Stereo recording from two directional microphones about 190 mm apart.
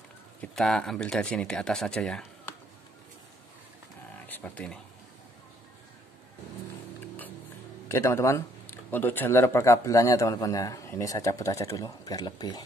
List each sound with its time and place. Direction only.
0.4 s speech: centre (ahead or behind)
4.3 s speech: 10° left (ahead or behind)
7.9 s speech: 15° left (ahead or behind)